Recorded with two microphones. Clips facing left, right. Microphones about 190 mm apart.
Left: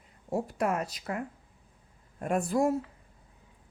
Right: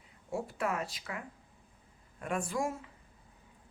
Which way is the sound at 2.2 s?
40° left (ahead or behind).